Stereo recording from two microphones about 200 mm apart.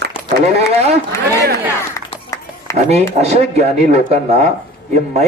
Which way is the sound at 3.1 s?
35° right (ahead or behind).